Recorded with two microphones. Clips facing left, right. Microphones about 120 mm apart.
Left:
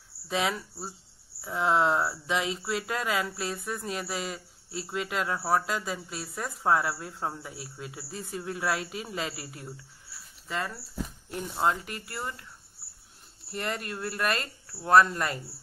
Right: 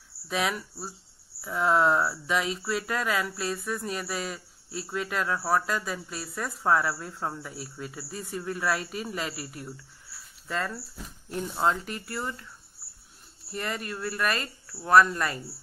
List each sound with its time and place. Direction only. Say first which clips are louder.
0.3 s speech: even; 25° left (ahead or behind)
11.2 s speech: right 2 dB; 5° left (ahead or behind)
13.5 s speech: even; 25° left (ahead or behind)